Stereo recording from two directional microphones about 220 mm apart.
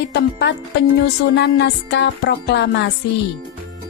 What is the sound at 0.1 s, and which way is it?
Music, 50° left (ahead or behind).